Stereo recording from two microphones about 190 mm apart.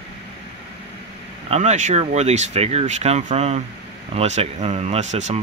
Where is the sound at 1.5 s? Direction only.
40° right (ahead or behind).